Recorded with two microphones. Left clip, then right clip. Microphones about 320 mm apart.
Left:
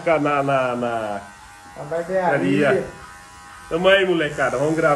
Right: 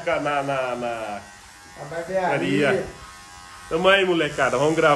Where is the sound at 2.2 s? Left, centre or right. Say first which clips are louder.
Left 2 dB; centre.